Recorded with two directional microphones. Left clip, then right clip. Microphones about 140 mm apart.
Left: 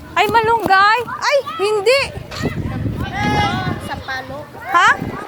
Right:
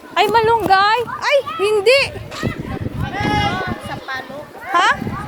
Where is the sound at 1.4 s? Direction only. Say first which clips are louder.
Right 1 dB; 10° right (ahead or behind).